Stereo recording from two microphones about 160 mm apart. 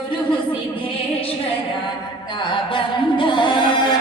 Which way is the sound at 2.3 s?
30° left (ahead or behind).